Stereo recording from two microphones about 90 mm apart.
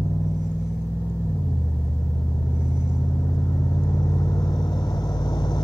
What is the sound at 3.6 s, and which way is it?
Vehicle, 30° left (ahead or behind).